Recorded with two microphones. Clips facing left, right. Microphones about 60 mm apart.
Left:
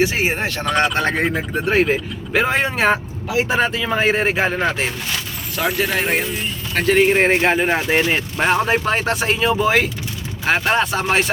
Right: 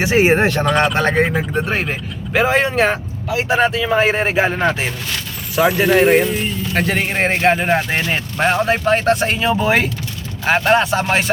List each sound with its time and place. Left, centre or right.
0.0 s speech: right
0.6 s speech: centre